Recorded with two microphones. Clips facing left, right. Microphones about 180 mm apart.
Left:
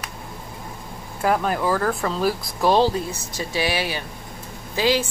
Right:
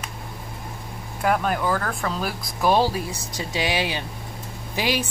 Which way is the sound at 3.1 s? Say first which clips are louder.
Left 1 dB; 15° right (ahead or behind).